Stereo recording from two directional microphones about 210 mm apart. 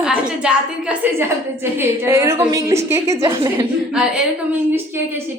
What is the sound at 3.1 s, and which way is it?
Speech, 25° right (ahead or behind).